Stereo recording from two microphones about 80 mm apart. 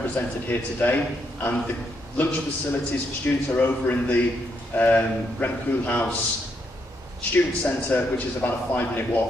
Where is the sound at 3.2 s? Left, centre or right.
Left.